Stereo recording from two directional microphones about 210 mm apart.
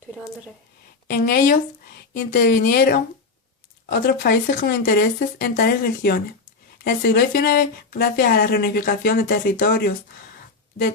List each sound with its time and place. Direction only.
1.1 s speech: 45° left (ahead or behind)
2.1 s speech: 55° left (ahead or behind); by 10.9 s 35° left (ahead or behind)